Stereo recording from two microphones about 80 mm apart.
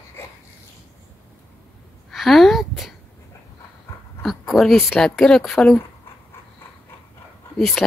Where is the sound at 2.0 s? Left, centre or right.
Centre.